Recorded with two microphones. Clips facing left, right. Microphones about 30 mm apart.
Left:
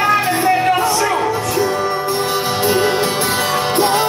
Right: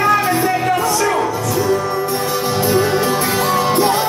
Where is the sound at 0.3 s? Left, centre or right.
Left.